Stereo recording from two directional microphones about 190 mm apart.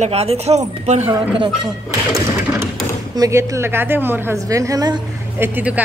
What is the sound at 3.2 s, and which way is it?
Speech, 15° right (ahead or behind).